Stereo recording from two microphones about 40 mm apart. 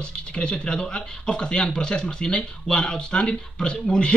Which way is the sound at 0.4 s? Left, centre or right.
Left.